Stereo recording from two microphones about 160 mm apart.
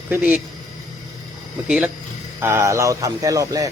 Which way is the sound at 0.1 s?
10° right (ahead or behind).